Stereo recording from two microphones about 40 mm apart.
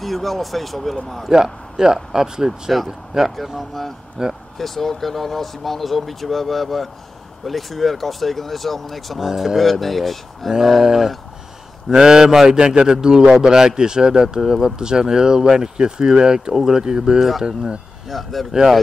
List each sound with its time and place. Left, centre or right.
0.0 s speech: centre
1.3 s speech: centre
4.6 s speech: centre
9.3 s speech: centre
9.6 s speech: centre
18.0 s speech: centre
18.5 s speech: centre